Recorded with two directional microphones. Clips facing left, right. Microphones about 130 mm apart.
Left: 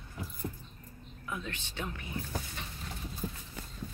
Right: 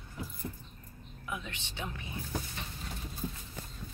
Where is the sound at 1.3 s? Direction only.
20° right (ahead or behind).